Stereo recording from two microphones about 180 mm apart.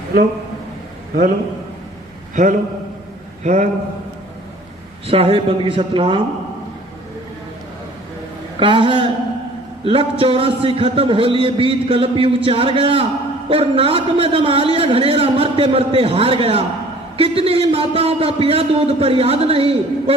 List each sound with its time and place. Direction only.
2.3 s a man's voice: 45° right (ahead or behind)
5.0 s a man's voice: 35° right (ahead or behind)
8.5 s a man's voice: 25° right (ahead or behind)